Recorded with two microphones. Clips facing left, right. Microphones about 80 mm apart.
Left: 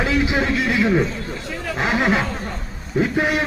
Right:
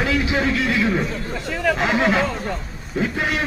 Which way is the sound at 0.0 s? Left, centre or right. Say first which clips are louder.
Left 1 dB; left.